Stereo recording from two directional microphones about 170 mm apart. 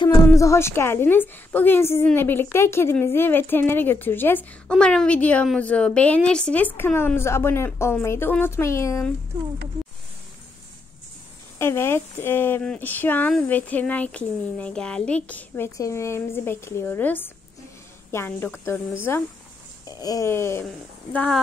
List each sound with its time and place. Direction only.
0.3 s speech: 15° left (ahead or behind)
11.5 s speech: 15° left (ahead or behind)